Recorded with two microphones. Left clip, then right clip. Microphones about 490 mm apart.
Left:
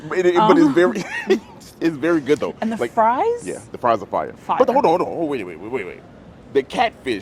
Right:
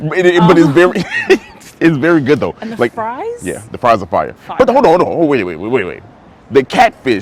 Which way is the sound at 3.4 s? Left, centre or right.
Right.